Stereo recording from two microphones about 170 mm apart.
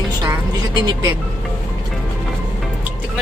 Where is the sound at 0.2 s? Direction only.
25° right (ahead or behind).